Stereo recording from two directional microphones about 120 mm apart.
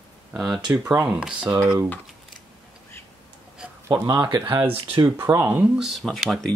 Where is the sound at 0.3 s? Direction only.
5° right (ahead or behind).